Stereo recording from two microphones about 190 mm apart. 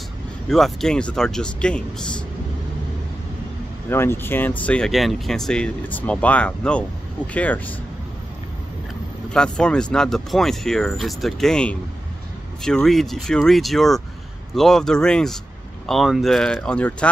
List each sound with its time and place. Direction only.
0.5 s speech: centre (ahead or behind)
3.9 s speech: 10° left (ahead or behind)
9.3 s speech: 5° left (ahead or behind)